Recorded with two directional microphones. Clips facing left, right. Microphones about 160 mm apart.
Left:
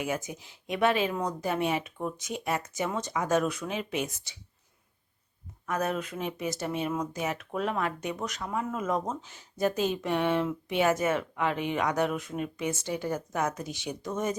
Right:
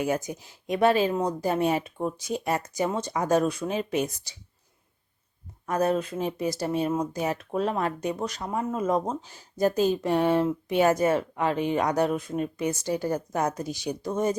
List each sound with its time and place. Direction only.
0.0 s speech: 40° right (ahead or behind)
5.6 s speech: 35° right (ahead or behind)